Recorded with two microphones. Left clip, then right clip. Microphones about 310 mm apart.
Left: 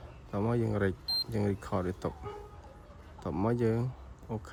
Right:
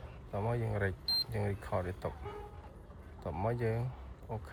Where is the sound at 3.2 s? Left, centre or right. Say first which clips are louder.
Left 4 dB; left.